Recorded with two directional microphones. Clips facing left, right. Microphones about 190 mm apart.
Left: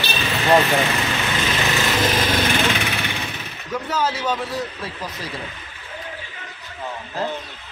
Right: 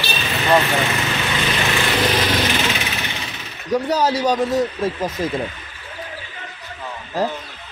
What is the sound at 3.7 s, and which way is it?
Speech, 40° right (ahead or behind).